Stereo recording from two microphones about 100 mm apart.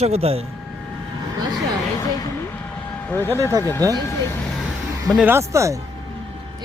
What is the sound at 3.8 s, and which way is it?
Speech, 35° right (ahead or behind).